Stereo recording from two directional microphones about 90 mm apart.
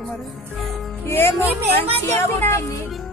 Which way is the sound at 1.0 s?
25° left (ahead or behind).